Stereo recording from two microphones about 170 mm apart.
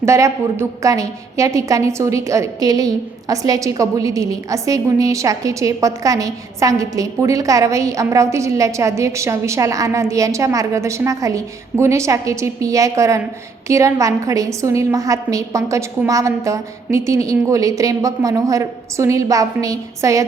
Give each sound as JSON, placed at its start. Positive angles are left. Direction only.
{"t": 0.0, "sound": "a woman's voice", "side_deg": -15}